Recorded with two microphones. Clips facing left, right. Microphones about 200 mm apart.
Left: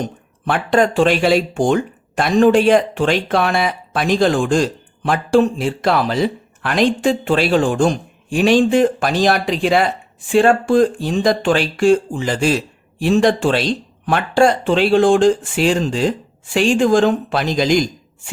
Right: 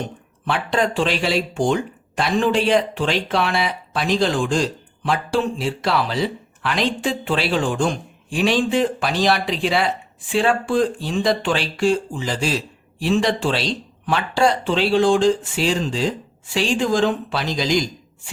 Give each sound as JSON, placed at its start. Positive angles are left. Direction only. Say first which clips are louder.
{"t": 0.0, "sound": "speech", "louder": "left 4 dB", "side_deg": 50}